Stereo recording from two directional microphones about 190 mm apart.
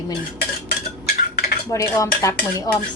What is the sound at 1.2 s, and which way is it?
Cutlery, 55° left (ahead or behind).